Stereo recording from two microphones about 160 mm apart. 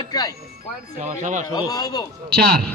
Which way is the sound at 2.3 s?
75° right (ahead or behind).